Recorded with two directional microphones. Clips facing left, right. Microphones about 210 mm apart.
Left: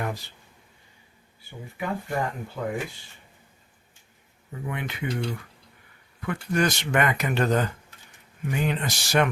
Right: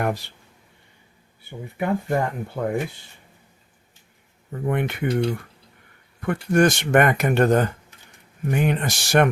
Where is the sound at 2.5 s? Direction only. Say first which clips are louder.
Right 5 dB; 45° right (ahead or behind).